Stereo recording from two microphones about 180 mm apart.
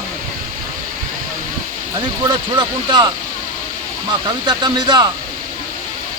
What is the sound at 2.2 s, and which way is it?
Speech, 25° right (ahead or behind).